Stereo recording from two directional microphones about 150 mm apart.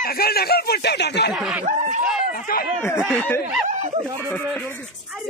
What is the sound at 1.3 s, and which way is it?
Speech, 10° right (ahead or behind).